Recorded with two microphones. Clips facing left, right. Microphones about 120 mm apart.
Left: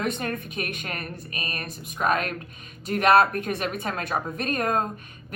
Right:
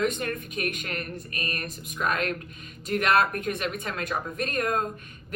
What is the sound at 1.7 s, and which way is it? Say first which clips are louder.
A woman's voice: left 6 dB; 40° left (ahead or behind).